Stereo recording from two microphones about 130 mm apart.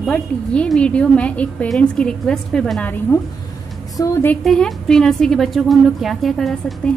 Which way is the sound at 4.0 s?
30° left (ahead or behind).